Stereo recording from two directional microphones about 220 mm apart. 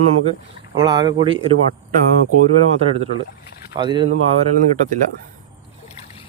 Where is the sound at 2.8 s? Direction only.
30° right (ahead or behind).